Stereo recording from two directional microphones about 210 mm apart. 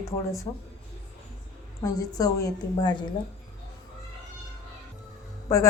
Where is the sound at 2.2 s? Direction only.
15° left (ahead or behind).